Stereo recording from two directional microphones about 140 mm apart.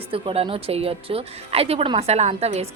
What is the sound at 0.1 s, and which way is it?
A woman's voice, 40° right (ahead or behind).